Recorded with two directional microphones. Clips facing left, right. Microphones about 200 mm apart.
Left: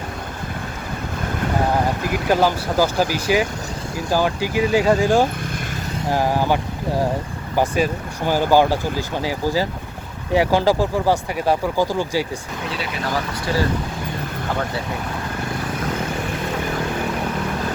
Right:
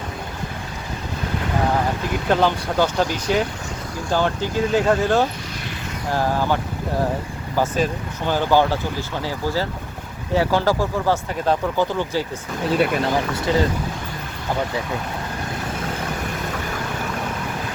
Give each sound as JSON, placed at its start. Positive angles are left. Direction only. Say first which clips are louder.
{"t": 2.2, "sound": "speech", "louder": "left 1 dB", "side_deg": 5}
{"t": 12.7, "sound": "speech", "louder": "right 12 dB", "side_deg": -50}